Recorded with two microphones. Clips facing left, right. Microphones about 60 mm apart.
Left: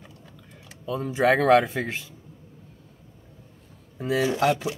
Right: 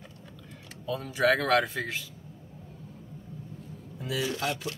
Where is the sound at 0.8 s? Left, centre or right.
Centre.